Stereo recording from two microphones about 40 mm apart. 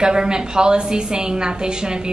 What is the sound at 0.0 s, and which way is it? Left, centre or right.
A woman's voice, centre.